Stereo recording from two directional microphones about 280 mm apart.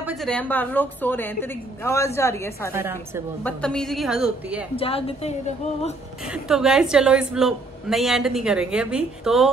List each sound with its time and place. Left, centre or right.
0.0 s a woman's voice: centre
2.7 s a woman's voice: centre
3.4 s a woman's voice: centre
4.7 s a woman's voice: centre
6.3 s a woman's voice: centre